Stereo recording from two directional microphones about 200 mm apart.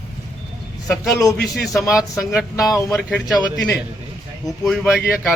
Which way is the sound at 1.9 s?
5° right (ahead or behind).